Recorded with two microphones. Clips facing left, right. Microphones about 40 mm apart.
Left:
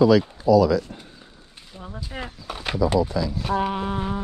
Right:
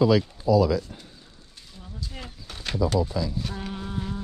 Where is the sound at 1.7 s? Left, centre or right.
Left.